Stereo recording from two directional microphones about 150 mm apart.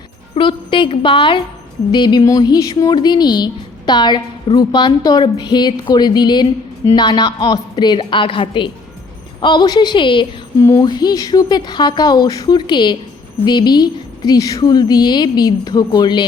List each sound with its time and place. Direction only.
0.3 s a woman's voice: 35° left (ahead or behind)